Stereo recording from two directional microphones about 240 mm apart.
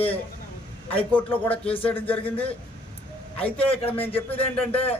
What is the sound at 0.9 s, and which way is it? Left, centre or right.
A man's voice, centre.